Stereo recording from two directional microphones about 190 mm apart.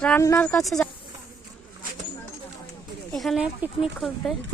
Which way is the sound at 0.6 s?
Centre (ahead or behind).